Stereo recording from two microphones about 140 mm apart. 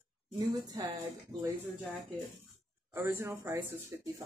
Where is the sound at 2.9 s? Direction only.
15° right (ahead or behind).